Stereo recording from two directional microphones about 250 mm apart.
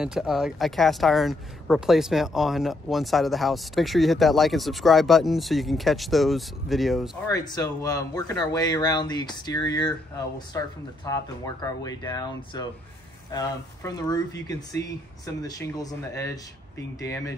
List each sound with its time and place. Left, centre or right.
0.0 s speech: centre
7.2 s speech: centre